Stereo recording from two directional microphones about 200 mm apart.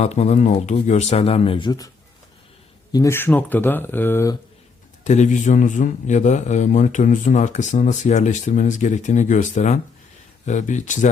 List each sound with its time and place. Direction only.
0.0 s a man's voice: 35° left (ahead or behind)
2.9 s speech: 15° left (ahead or behind)
5.0 s a man's voice: 35° left (ahead or behind)